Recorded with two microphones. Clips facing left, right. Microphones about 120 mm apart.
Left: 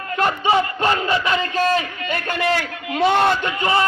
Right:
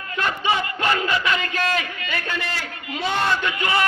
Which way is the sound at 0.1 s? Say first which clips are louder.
Left 5 dB; 40° left (ahead or behind).